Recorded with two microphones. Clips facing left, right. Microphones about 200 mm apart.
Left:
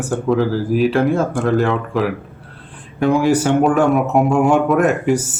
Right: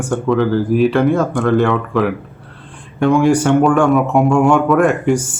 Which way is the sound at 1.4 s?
Centre (ahead or behind).